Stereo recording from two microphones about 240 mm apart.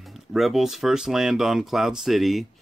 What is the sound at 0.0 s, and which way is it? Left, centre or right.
Speech, centre.